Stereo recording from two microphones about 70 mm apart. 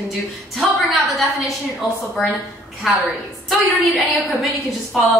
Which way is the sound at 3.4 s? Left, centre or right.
Centre.